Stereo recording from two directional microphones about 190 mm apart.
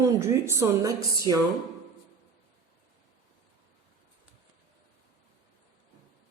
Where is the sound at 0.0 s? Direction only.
15° right (ahead or behind).